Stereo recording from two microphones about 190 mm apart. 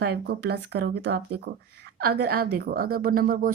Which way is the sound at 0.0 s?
55° right (ahead or behind).